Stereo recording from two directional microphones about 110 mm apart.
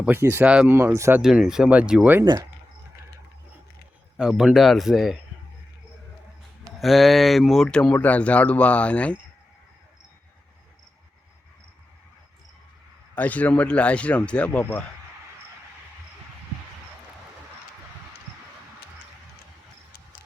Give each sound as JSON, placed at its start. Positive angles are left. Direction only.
{"t": 0.0, "sound": "speech", "side_deg": -20}
{"t": 0.4, "sound": "speech", "side_deg": -5}
{"t": 0.7, "sound": "speech", "side_deg": -20}
{"t": 1.2, "sound": "speech", "side_deg": -5}
{"t": 2.2, "sound": "speech", "side_deg": -45}
{"t": 4.2, "sound": "speech", "side_deg": -5}
{"t": 6.7, "sound": "speech", "side_deg": 0}
{"t": 13.1, "sound": "speech", "side_deg": 15}